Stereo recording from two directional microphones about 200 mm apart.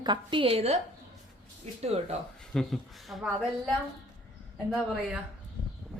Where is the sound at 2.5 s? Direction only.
Centre (ahead or behind).